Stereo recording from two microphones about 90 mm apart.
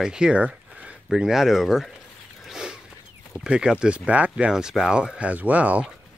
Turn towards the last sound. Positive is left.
turn(degrees=-15)  # may be behind; listen again after turning